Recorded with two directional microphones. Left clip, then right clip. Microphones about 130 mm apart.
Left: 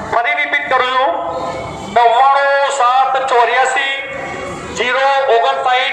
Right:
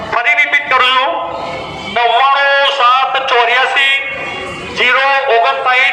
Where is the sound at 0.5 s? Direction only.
55° left (ahead or behind).